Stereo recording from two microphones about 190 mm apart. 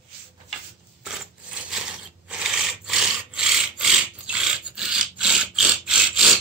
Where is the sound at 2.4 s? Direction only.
5° right (ahead or behind).